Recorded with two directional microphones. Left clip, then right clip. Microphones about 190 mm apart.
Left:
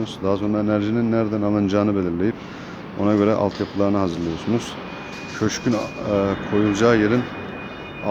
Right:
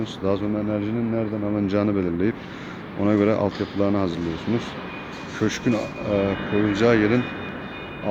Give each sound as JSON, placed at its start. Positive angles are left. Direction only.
{"t": 0.0, "sound": "speech", "side_deg": 5}
{"t": 0.5, "sound": "speech", "side_deg": 25}
{"t": 1.6, "sound": "speech", "side_deg": 10}